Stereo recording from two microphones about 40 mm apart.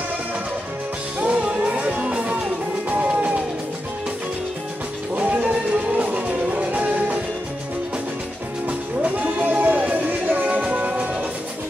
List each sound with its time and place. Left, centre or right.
1.2 s music: right
5.1 s music: right
8.6 s music: right